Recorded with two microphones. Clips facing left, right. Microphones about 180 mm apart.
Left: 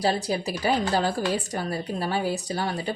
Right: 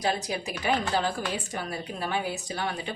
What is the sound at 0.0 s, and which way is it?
A woman's voice, 35° left (ahead or behind).